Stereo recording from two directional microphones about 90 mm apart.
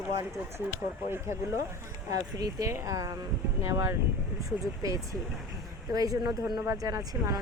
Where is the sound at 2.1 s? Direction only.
40° right (ahead or behind).